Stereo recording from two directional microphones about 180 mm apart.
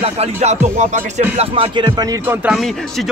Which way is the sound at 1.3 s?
30° right (ahead or behind).